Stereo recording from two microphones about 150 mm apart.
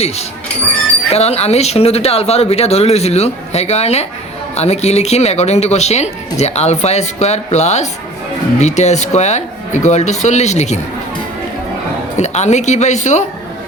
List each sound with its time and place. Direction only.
1.1 s speech: 45° left (ahead or behind)
12.1 s speech: 50° left (ahead or behind)